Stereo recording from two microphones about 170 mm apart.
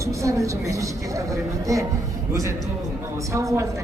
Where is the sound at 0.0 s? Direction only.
20° right (ahead or behind).